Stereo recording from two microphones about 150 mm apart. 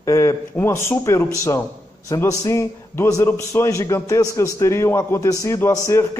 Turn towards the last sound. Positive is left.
turn(degrees=20)  # may be behind; listen again after turning